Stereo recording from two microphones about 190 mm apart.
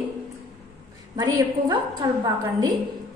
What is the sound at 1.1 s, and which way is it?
A woman's voice, 20° right (ahead or behind).